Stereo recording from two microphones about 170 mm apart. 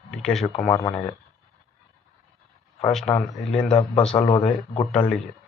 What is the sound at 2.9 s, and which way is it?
Speech, centre (ahead or behind).